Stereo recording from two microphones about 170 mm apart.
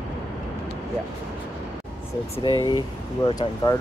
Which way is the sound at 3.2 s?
25° left (ahead or behind).